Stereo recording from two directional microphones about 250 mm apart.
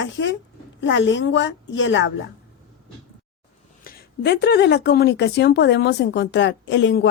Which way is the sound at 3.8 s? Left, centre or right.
Left.